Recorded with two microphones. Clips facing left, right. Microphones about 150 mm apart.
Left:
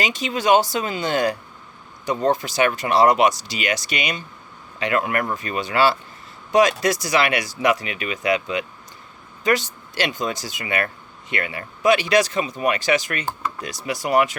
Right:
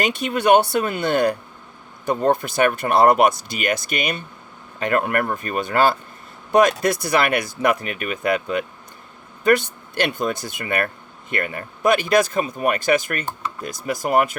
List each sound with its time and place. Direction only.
0.0 s speech: 55° right (ahead or behind)